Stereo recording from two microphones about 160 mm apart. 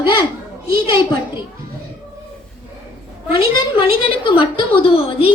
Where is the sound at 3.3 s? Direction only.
35° left (ahead or behind).